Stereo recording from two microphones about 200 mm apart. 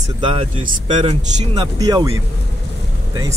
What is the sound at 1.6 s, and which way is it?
Speech, 20° right (ahead or behind).